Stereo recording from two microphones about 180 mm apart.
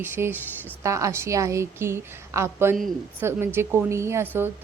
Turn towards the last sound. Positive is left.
turn(degrees=-10)  # may be behind; listen again after turning